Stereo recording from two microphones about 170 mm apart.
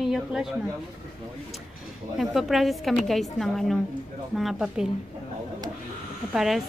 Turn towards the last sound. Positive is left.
turn(degrees=0)  # may be behind; listen again after turning